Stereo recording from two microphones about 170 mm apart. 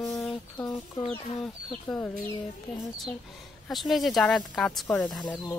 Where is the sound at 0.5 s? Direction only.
15° left (ahead or behind).